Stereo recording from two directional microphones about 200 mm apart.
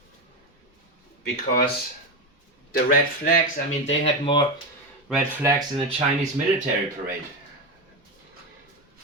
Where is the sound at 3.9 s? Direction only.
25° left (ahead or behind).